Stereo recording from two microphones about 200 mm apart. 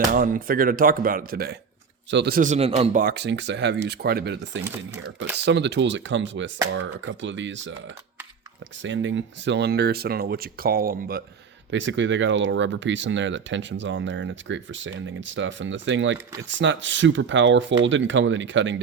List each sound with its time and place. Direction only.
0.1 s speech: 45° right (ahead or behind)
3.0 s speech: 55° right (ahead or behind)
8.8 s speech: 65° right (ahead or behind); by 11.2 s 45° right (ahead or behind)
11.7 s speech: 65° right (ahead or behind)